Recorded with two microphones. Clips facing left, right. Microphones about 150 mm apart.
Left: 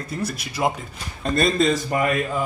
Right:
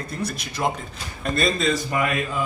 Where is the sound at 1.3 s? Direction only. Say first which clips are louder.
Left 3 dB; 45° left (ahead or behind).